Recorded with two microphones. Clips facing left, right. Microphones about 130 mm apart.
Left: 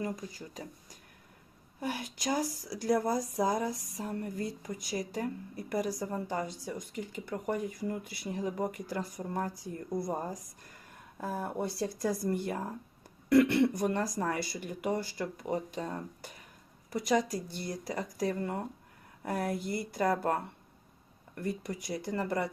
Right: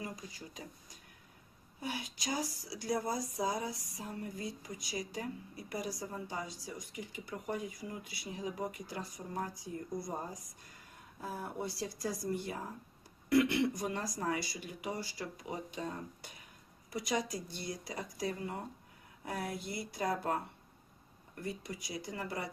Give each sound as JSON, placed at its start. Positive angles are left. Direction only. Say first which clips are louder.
{"t": 0.0, "sound": "speech", "louder": "left 7 dB", "side_deg": 45}